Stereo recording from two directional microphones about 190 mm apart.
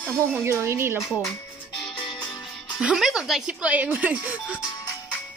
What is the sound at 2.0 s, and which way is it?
Music, 25° left (ahead or behind).